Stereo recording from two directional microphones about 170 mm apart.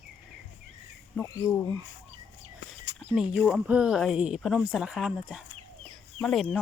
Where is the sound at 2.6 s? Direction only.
90° left.